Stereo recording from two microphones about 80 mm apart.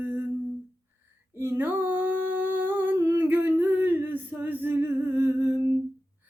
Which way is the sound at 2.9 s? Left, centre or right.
Right.